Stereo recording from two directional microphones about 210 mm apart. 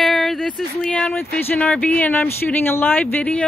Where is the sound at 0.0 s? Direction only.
Centre (ahead or behind).